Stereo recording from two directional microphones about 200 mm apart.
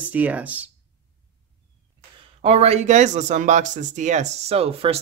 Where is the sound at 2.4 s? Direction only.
30° right (ahead or behind).